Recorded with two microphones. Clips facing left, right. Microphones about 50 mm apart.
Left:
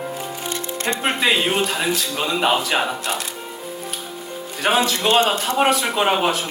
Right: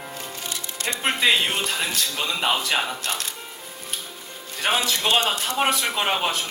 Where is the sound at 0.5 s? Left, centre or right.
Left.